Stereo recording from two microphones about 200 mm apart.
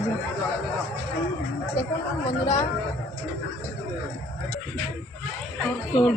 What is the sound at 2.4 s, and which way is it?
Speech, 35° left (ahead or behind).